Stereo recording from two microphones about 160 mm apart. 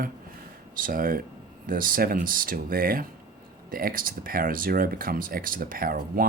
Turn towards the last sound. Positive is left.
turn(degrees=-65)  # may be behind; listen again after turning